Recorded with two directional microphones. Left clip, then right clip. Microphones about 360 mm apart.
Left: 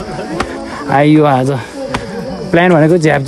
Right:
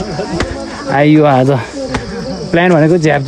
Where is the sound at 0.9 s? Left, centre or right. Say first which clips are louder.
Even; centre.